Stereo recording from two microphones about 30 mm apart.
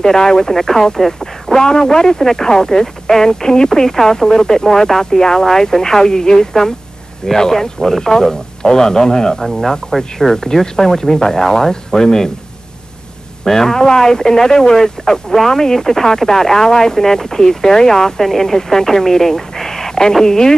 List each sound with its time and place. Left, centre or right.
0.0 s speech: centre
1.5 s a man's voice: left
9.8 s a man's voice: centre
13.4 s a man's voice: centre